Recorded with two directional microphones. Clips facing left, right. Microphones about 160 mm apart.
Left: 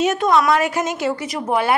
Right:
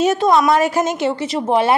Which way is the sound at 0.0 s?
30° right (ahead or behind).